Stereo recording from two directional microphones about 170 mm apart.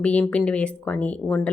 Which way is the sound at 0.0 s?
5° left (ahead or behind).